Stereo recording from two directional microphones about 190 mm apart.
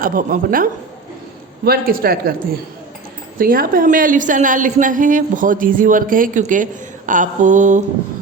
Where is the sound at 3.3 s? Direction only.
50° right (ahead or behind).